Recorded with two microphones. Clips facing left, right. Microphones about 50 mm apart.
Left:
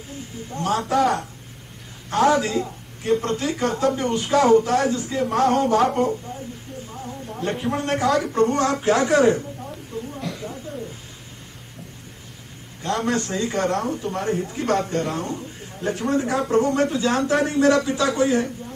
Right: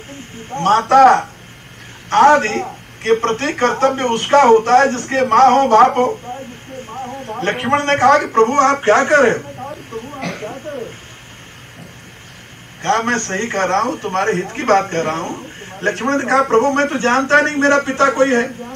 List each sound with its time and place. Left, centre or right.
0.5 s a man's voice: right
9.9 s a sound: right
12.8 s a man's voice: right